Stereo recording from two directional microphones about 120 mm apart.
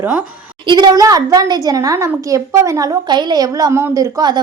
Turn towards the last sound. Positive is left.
turn(degrees=-35)  # may be behind; listen again after turning